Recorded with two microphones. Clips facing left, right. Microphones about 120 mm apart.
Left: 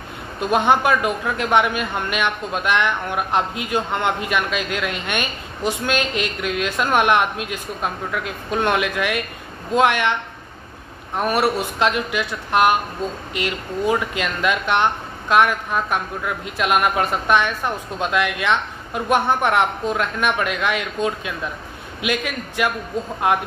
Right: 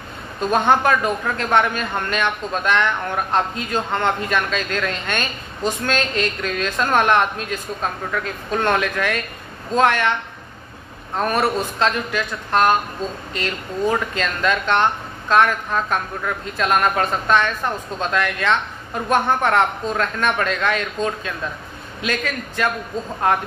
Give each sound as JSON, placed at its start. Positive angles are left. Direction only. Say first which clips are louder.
{"t": 0.4, "sound": "a man's voice", "louder": "even", "side_deg": 15}
{"t": 11.1, "sound": "a man's voice", "louder": "even", "side_deg": 10}